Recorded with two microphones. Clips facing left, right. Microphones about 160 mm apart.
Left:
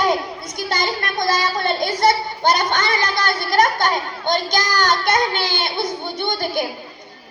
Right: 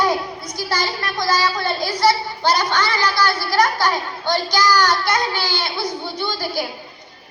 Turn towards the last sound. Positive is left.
turn(degrees=20)  # may be behind; listen again after turning